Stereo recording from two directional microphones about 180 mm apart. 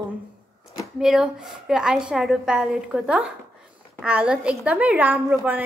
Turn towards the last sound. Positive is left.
turn(degrees=-10)  # may be behind; listen again after turning